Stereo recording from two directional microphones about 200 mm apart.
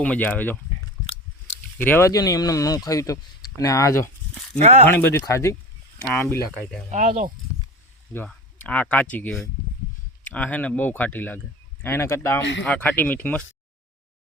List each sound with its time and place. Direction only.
0.0 s speech: 5° left (ahead or behind)
1.8 s speech: 10° left (ahead or behind)
4.6 s speech: 35° right (ahead or behind)
4.9 s speech: 10° left (ahead or behind)
6.9 s speech: 40° right (ahead or behind)
8.1 s speech: 10° left (ahead or behind)
12.4 s speech: 65° left (ahead or behind)
12.6 s speech: 10° left (ahead or behind)